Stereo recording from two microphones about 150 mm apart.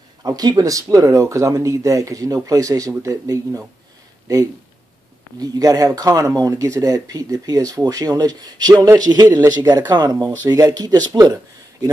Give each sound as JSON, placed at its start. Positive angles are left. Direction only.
{"t": 0.2, "sound": "speech", "side_deg": -25}
{"t": 5.4, "sound": "speech", "side_deg": -25}